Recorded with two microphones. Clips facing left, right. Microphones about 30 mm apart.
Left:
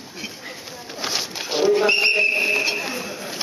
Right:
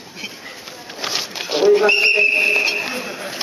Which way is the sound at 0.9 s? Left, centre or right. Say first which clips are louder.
Right 2 dB; centre.